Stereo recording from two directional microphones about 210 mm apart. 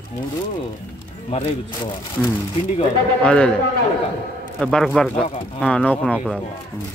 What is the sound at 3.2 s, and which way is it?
Speech, 5° left (ahead or behind).